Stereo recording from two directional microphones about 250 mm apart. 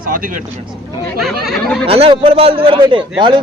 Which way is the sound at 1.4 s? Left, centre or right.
Centre.